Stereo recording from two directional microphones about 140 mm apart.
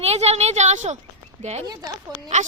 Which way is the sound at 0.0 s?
50° right (ahead or behind).